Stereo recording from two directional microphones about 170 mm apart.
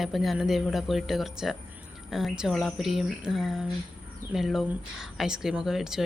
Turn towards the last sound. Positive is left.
turn(degrees=-5)  # may be behind; listen again after turning